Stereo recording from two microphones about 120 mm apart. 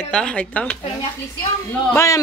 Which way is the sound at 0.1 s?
10° left (ahead or behind).